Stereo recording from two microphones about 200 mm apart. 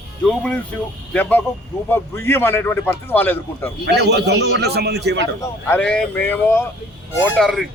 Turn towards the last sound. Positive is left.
turn(degrees=0)  # may be behind; listen again after turning